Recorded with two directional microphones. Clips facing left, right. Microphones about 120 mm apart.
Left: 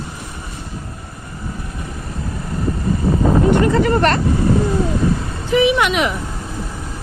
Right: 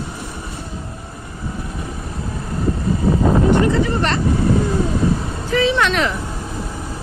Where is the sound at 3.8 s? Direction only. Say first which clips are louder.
Left 5 dB; 50° left (ahead or behind).